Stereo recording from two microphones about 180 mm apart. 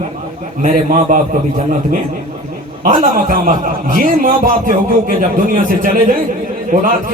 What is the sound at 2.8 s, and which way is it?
A man's voice, 50° right (ahead or behind).